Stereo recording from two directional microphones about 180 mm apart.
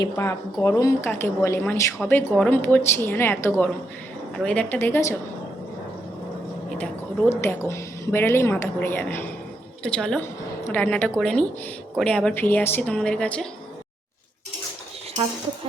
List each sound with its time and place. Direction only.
0.0 s speech: 15° left (ahead or behind)
7.3 s a woman's voice: 15° left (ahead or behind)